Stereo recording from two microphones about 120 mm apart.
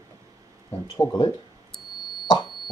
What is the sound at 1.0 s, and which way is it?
Speech, 35° left (ahead or behind).